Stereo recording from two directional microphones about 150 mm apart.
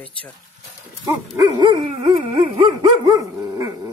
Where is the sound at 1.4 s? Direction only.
25° right (ahead or behind).